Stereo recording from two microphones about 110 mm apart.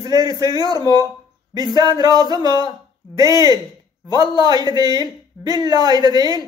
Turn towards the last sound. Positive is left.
turn(degrees=-40)  # may be behind; listen again after turning